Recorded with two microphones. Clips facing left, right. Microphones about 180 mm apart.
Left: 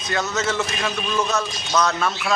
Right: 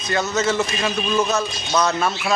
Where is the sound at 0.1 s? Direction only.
Centre (ahead or behind).